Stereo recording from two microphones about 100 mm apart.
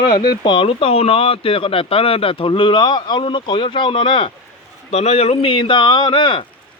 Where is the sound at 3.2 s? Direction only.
55° left (ahead or behind).